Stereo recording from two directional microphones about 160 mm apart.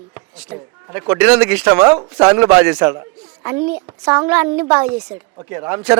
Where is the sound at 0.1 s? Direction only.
10° right (ahead or behind).